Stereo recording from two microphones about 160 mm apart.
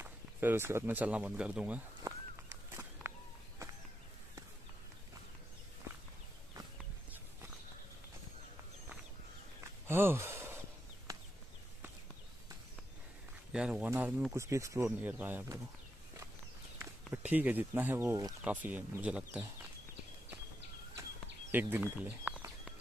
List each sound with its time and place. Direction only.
0.0 s speech: 15° right (ahead or behind)
2.1 s a sound: 20° right (ahead or behind)
9.6 s a sound: 15° right (ahead or behind)
13.5 s speech: 5° right (ahead or behind)
17.3 s speech: 10° right (ahead or behind)
21.5 s bird: 10° right (ahead or behind)